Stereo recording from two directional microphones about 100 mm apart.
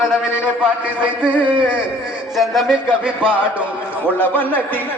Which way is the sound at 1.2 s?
10° right (ahead or behind).